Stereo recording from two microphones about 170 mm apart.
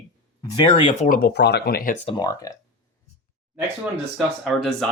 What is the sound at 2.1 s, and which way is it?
Speech, 25° left (ahead or behind).